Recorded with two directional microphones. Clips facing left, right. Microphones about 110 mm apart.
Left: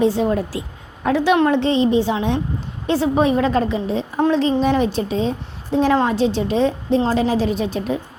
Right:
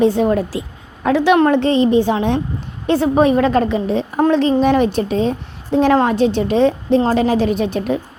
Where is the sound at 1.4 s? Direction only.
50° right (ahead or behind).